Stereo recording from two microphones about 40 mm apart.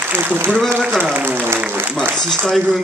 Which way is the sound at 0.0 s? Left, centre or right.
Right.